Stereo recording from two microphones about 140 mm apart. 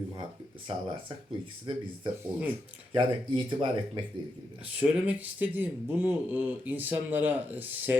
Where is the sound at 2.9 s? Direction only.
40° right (ahead or behind).